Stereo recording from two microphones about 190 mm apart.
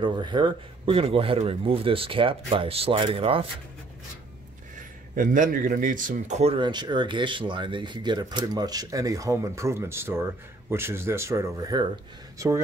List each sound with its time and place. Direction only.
0.0 s a man's voice: 25° right (ahead or behind)
5.1 s a man's voice: 45° right (ahead or behind); by 12.6 s 15° right (ahead or behind)